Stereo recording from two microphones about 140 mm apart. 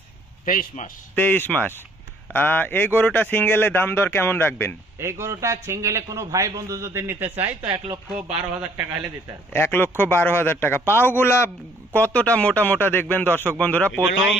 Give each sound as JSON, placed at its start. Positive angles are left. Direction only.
{"t": 0.5, "sound": "a man's voice", "side_deg": 85}
{"t": 1.1, "sound": "a man's voice", "side_deg": 15}
{"t": 4.9, "sound": "a man's voice", "side_deg": -20}
{"t": 9.5, "sound": "a man's voice", "side_deg": 15}